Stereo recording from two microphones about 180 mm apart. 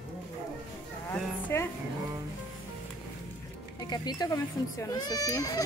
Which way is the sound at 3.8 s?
25° left (ahead or behind).